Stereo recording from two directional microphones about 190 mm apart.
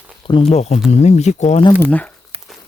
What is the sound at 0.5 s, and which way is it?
Speech, 35° left (ahead or behind).